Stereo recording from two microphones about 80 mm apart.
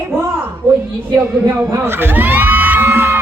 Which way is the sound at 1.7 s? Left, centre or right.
Right.